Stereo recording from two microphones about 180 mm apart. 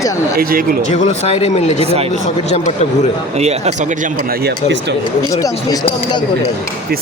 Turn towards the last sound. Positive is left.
turn(degrees=20)  # may be behind; listen again after turning